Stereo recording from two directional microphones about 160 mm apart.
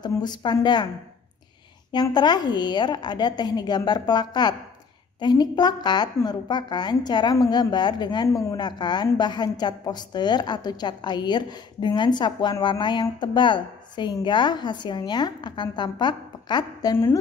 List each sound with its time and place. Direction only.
0.0 s a woman's voice: 25° left (ahead or behind)
1.9 s a woman's voice: 25° left (ahead or behind)